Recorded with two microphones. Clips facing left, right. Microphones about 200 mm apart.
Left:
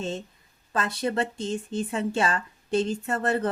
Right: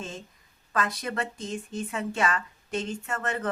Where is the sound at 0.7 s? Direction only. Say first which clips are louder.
Left 3 dB; 30° left (ahead or behind).